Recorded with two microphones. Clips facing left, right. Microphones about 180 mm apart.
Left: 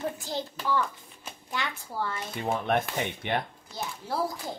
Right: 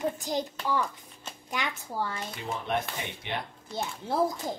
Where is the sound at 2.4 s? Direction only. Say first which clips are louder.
Left 4 dB; 55° left (ahead or behind).